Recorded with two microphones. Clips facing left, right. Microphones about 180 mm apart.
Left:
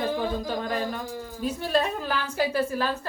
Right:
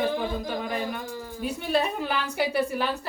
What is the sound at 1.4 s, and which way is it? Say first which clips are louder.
A woman's voice: left 1 dB; 10° right (ahead or behind).